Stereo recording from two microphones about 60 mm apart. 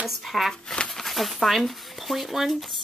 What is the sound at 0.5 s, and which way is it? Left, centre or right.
Speech, centre.